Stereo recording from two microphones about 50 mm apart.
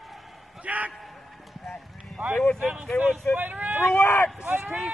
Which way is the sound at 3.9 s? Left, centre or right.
Left.